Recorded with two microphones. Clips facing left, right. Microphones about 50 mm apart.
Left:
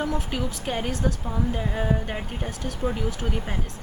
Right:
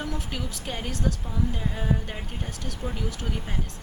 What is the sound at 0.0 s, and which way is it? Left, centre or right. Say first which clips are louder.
Speech: left 5 dB; centre.